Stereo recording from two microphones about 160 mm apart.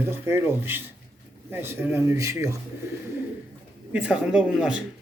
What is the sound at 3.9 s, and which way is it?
Speech, 10° right (ahead or behind).